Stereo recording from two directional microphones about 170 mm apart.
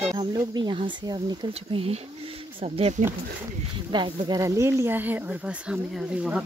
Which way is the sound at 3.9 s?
25° right (ahead or behind).